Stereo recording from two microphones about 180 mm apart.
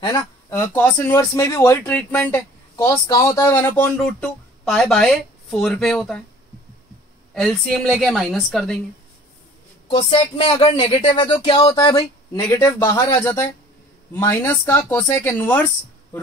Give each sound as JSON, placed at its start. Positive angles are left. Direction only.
{"t": 0.0, "sound": "speech", "side_deg": 15}
{"t": 7.3, "sound": "a woman's voice", "side_deg": 0}
{"t": 9.8, "sound": "speech", "side_deg": 30}